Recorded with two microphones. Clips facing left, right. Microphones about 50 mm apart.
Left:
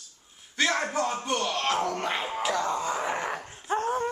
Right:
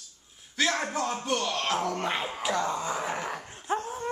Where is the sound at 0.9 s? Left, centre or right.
Centre.